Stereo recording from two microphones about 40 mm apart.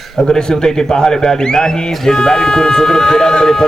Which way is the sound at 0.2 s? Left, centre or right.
Centre.